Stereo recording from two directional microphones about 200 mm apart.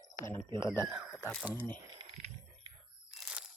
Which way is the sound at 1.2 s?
10° left (ahead or behind).